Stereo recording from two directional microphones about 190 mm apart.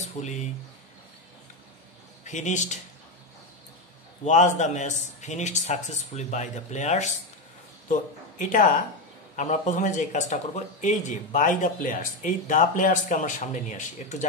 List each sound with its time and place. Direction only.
0.0 s a sound: 40° left (ahead or behind)
2.2 s speech: 40° left (ahead or behind)
4.2 s speech: 40° left (ahead or behind)